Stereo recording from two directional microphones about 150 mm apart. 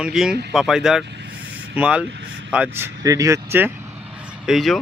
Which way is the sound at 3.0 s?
20° right (ahead or behind).